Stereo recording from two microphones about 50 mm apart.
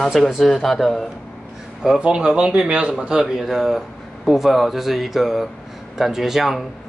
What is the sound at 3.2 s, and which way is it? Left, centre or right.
Speech, centre.